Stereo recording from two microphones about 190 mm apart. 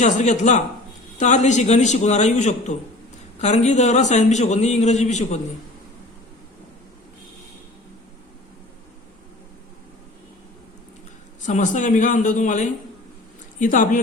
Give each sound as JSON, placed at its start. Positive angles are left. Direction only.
{"t": 0.0, "sound": "a man's voice", "side_deg": 40}
{"t": 11.4, "sound": "a man's voice", "side_deg": 40}